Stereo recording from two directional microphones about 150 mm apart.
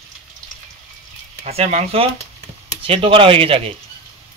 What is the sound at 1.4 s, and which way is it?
Speech, 45° right (ahead or behind).